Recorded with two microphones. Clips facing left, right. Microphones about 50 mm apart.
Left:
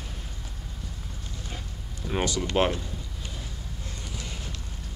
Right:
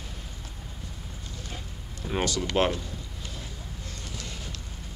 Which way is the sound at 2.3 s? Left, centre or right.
Centre.